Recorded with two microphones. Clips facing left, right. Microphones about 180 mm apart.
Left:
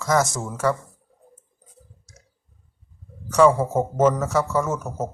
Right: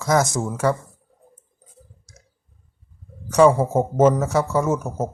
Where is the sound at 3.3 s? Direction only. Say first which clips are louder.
Right 2 dB; 10° right (ahead or behind).